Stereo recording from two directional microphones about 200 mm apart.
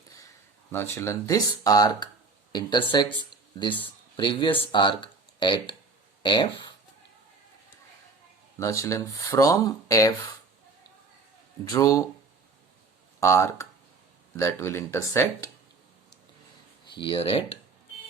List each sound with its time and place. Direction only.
0.7 s speech: 10° left (ahead or behind)
8.5 s speech: 15° left (ahead or behind)
11.7 s speech: 15° left (ahead or behind)
13.1 s speech: 15° left (ahead or behind)
16.9 s speech: 25° left (ahead or behind)